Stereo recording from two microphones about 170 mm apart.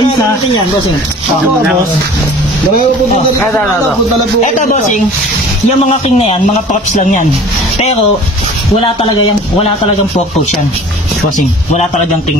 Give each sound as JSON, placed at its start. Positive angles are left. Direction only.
{"t": 4.4, "sound": "a man's voice", "side_deg": 45}
{"t": 6.0, "sound": "a man's voice", "side_deg": 40}
{"t": 8.8, "sound": "a man's voice", "side_deg": 30}